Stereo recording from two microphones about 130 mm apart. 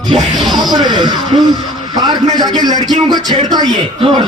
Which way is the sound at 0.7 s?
35° right (ahead or behind).